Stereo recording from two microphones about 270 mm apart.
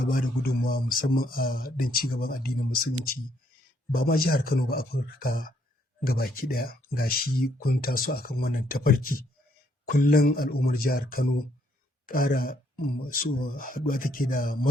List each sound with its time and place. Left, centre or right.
0.1 s speech: left
3.9 s speech: left